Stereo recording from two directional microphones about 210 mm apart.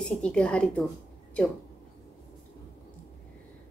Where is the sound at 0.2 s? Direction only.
5° left (ahead or behind).